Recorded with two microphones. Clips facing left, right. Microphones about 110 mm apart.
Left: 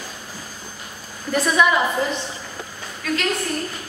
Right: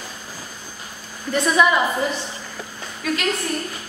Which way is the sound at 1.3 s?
Centre (ahead or behind).